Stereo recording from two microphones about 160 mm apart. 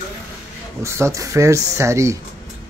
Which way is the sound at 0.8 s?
20° right (ahead or behind).